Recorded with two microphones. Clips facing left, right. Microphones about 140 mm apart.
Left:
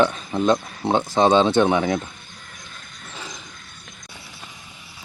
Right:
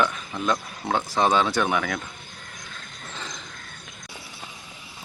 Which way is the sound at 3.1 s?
10° left (ahead or behind).